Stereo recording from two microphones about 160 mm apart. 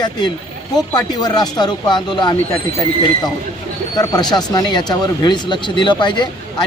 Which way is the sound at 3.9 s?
25° left (ahead or behind).